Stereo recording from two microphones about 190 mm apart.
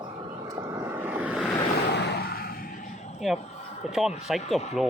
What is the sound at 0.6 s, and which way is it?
Vehicle, 15° right (ahead or behind).